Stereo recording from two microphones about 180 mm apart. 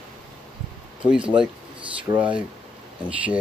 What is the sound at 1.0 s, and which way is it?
Speech, 5° right (ahead or behind).